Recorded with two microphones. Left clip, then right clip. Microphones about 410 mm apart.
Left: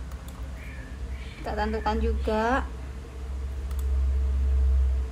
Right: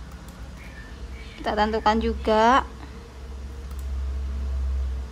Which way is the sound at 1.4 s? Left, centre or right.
Right.